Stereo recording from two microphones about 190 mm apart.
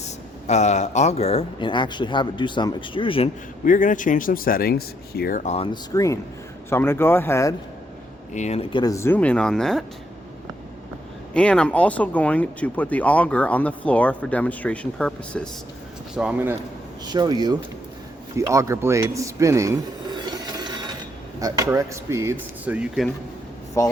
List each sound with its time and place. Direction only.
0.0 s speech: 35° left (ahead or behind)
3.6 s speech: 45° left (ahead or behind)
5.7 s speech: 15° left (ahead or behind)
8.3 s speech: 35° left (ahead or behind); by 9.8 s 5° left (ahead or behind)
11.3 s speech: 5° left (ahead or behind)
16.1 s speech: 5° right (ahead or behind)
17.1 s speech: 20° right (ahead or behind); by 23.0 s 5° right (ahead or behind)
23.8 s speech: 15° left (ahead or behind)